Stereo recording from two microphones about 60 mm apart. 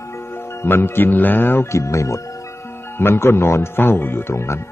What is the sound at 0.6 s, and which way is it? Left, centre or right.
Speech, left.